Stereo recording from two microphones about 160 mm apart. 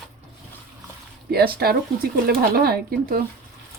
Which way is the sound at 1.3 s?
70° right (ahead or behind).